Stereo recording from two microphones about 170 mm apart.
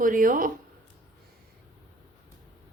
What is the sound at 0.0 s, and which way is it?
Speech, 50° right (ahead or behind).